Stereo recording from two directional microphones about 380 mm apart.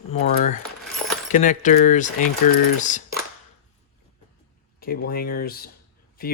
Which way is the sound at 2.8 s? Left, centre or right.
Centre.